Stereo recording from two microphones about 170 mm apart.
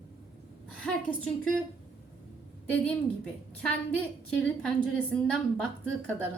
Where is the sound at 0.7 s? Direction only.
5° left (ahead or behind).